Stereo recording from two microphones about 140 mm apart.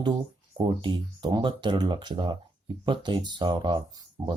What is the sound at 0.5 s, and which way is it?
Speech, 35° right (ahead or behind).